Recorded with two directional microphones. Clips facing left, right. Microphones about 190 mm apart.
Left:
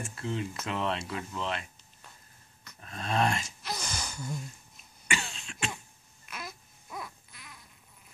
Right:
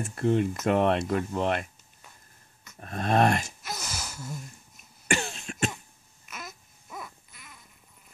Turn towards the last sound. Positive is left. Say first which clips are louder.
# even
turn(degrees=0)  # may be behind; listen again after turning